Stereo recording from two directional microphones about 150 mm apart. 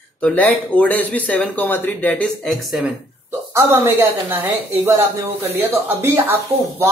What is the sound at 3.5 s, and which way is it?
Speech, 15° right (ahead or behind).